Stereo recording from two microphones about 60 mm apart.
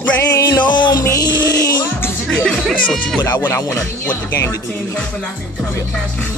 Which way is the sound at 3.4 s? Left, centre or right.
Left.